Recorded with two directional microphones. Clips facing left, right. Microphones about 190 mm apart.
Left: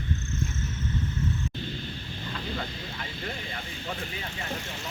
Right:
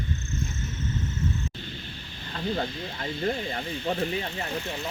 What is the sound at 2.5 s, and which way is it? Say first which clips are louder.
Speech: right 5 dB; 40° right (ahead or behind).